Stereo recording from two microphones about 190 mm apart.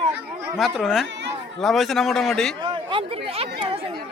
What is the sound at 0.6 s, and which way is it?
A man's voice, centre (ahead or behind).